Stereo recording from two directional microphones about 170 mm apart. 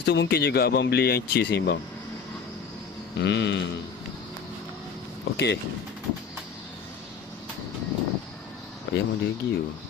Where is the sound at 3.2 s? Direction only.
90° left.